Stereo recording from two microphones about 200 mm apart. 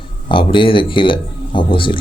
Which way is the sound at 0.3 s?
25° left (ahead or behind).